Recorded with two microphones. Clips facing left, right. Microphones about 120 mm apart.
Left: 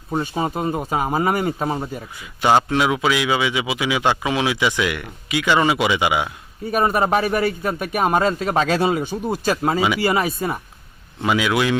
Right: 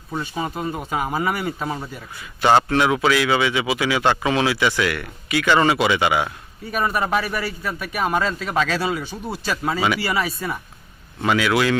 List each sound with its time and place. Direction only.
0.1 s speech: 35° left (ahead or behind)
2.1 s a man's voice: 15° left (ahead or behind)
6.7 s speech: 40° left (ahead or behind)
11.2 s a man's voice: 15° left (ahead or behind)